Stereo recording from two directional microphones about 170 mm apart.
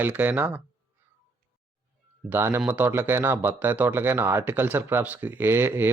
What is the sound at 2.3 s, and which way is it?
Speech, 15° right (ahead or behind).